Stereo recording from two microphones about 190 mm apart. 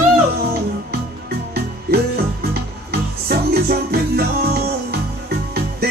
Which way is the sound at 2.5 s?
55° right (ahead or behind).